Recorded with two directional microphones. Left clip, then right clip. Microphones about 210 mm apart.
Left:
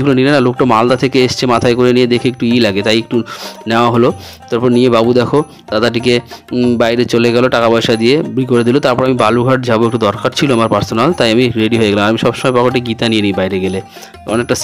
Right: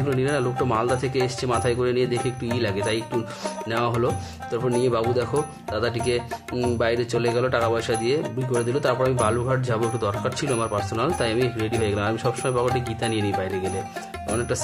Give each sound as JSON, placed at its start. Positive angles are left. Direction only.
{"t": 0.0, "sound": "speech", "side_deg": 45}